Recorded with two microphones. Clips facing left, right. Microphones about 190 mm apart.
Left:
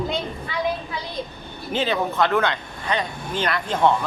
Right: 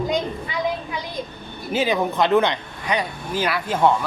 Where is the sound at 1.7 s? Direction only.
10° right (ahead or behind).